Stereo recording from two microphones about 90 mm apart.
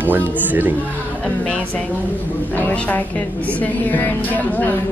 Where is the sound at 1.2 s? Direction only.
15° left (ahead or behind).